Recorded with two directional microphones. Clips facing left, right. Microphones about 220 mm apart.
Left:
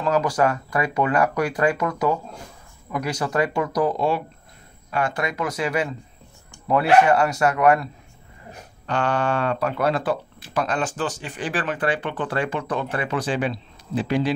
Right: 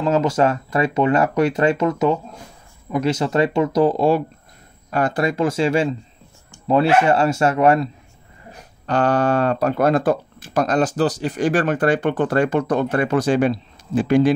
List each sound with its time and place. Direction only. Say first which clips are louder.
0.0 s speech: right 3 dB; 25° right (ahead or behind)
8.8 s speech: right 5 dB; 40° right (ahead or behind)